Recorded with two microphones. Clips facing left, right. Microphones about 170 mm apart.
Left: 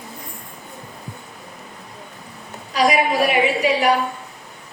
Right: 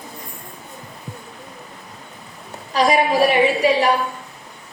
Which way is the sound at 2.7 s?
30° right (ahead or behind).